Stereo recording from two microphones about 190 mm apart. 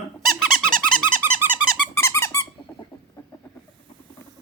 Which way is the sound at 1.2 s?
10° right (ahead or behind).